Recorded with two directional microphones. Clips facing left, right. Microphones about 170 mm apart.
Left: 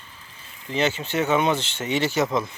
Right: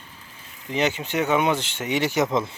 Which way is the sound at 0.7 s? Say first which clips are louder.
Even; 15° right (ahead or behind).